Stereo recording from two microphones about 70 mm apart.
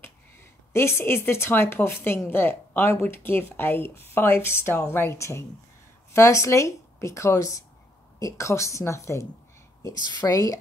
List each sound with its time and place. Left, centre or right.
0.7 s speech: left
10.0 s a woman's voice: left